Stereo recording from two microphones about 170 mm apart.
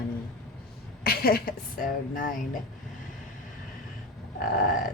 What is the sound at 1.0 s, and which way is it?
A woman's voice, 60° left (ahead or behind).